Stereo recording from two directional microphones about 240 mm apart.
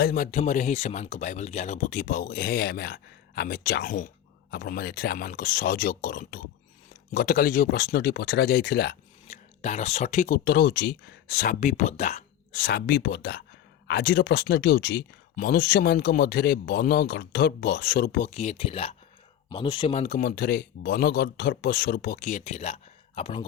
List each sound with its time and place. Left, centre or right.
0.0 s speech: left
9.2 s speech: left